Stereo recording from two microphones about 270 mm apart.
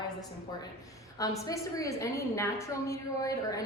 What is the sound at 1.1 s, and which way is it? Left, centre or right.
A woman's voice, centre.